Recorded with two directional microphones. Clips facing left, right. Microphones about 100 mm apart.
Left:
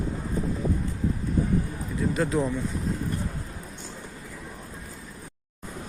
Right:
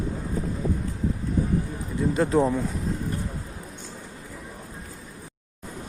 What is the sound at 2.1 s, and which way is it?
Speech, 35° right (ahead or behind).